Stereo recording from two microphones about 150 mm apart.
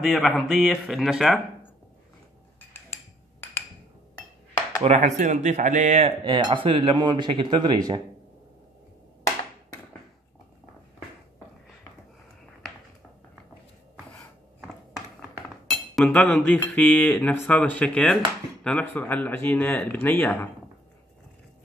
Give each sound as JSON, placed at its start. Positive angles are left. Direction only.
{"t": 0.0, "sound": "speech", "side_deg": 0}
{"t": 4.8, "sound": "speech", "side_deg": -50}
{"t": 6.2, "sound": "speech", "side_deg": -35}
{"t": 15.7, "sound": "speech", "side_deg": 5}